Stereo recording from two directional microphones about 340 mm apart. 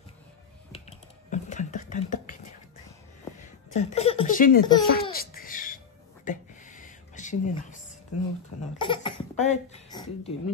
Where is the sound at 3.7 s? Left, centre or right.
Centre.